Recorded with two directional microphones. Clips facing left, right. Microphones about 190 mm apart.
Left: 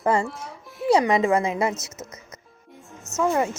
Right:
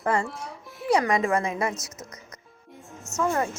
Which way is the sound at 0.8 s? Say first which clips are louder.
Left 4 dB; 25° left (ahead or behind).